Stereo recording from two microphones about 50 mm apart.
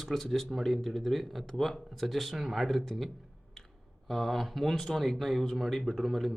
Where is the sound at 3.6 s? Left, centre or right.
Centre.